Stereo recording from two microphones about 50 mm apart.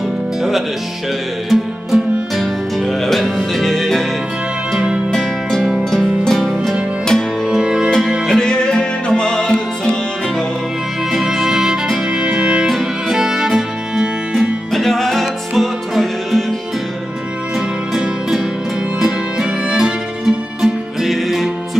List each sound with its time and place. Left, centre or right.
0.4 s music: centre
5.1 s music: centre
7.4 s music: centre
8.3 s music: centre
11.1 s music: centre
12.6 s music: centre
14.7 s music: centre
18.9 s music: centre